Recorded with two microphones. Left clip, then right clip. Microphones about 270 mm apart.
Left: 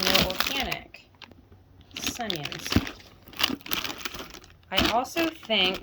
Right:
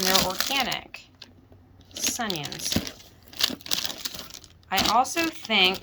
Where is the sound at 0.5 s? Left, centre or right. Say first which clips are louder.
Right 4 dB; centre.